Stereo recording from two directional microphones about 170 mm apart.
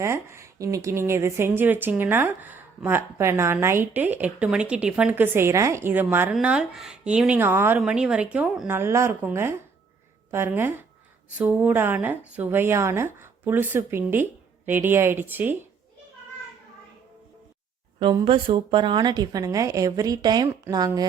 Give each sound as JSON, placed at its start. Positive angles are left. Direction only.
{"t": 0.0, "sound": "a woman's voice", "side_deg": -15}
{"t": 18.0, "sound": "a woman's voice", "side_deg": -30}